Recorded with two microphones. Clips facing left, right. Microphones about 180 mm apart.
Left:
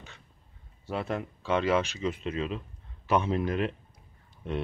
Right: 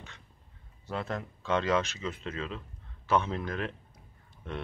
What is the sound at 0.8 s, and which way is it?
Speech, 10° left (ahead or behind).